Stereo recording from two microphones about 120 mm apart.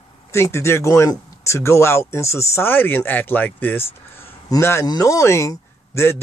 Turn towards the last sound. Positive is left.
turn(degrees=25)  # may be behind; listen again after turning